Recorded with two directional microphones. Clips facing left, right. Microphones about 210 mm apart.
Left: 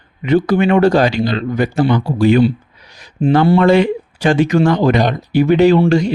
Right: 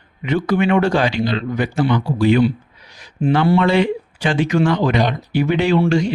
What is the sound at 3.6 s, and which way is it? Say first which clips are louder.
Speech: left 5 dB; 45° left (ahead or behind).